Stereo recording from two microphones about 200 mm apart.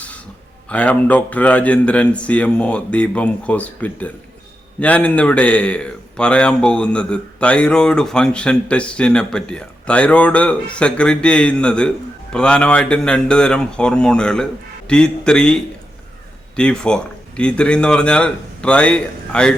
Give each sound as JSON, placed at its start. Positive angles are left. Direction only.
{"t": 0.7, "sound": "speech", "side_deg": 5}